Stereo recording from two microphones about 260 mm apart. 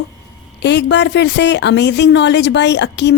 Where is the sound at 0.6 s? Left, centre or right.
Left.